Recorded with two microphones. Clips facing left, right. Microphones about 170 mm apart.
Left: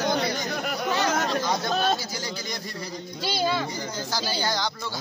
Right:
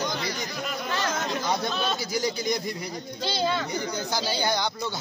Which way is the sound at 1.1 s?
65° left (ahead or behind).